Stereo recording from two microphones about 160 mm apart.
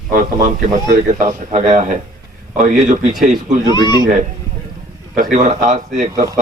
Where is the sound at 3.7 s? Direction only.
25° left (ahead or behind).